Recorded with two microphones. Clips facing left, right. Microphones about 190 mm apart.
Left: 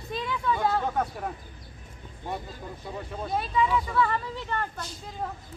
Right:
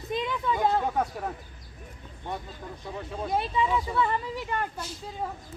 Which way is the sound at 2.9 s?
Centre (ahead or behind).